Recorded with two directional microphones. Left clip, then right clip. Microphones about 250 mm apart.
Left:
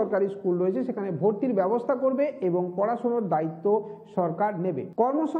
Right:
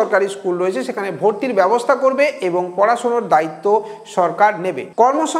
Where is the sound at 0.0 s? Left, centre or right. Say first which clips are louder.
Right 9 dB; centre.